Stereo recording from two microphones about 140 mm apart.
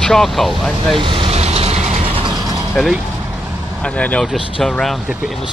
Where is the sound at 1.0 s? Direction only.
40° right (ahead or behind).